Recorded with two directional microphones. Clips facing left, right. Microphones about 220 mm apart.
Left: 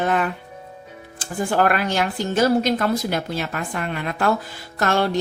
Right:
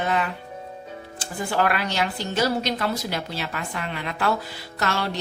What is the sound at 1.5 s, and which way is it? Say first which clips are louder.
A woman's voice: left 4 dB; 45° left (ahead or behind).